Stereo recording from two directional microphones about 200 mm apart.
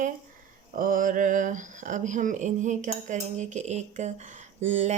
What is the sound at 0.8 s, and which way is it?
A woman's voice, 45° right (ahead or behind).